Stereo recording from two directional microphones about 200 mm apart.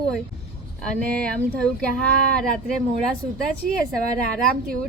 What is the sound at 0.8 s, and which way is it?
Speech, 5° left (ahead or behind).